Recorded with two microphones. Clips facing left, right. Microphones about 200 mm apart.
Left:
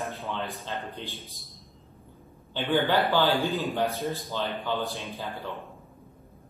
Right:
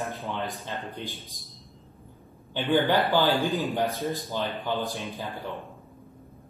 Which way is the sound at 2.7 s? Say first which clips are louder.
Right 1 dB; 15° right (ahead or behind).